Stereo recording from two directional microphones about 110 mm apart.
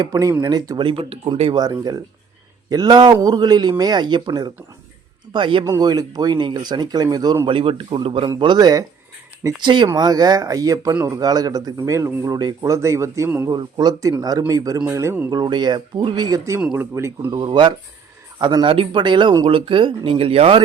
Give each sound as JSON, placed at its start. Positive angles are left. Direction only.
{"t": 0.0, "sound": "speech", "side_deg": -35}
{"t": 0.8, "sound": "speech", "side_deg": -55}
{"t": 1.5, "sound": "speech", "side_deg": -35}
{"t": 5.6, "sound": "speech", "side_deg": -35}
{"t": 7.4, "sound": "speech", "side_deg": -55}
{"t": 8.4, "sound": "speech", "side_deg": -40}
{"t": 13.5, "sound": "speech", "side_deg": -40}
{"t": 15.3, "sound": "speech", "side_deg": -40}
{"t": 16.7, "sound": "speech", "side_deg": -25}
{"t": 17.3, "sound": "speech", "side_deg": -45}